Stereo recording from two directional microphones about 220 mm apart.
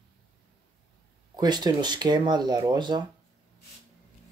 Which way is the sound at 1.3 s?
20° right (ahead or behind).